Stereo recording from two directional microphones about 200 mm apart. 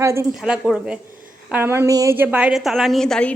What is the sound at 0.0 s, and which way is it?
A woman's voice, 15° right (ahead or behind).